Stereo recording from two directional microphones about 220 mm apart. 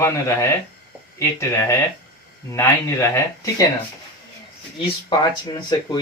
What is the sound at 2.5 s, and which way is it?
Speech, 10° left (ahead or behind).